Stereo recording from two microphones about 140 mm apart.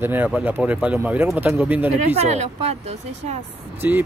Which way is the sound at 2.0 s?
50° right (ahead or behind).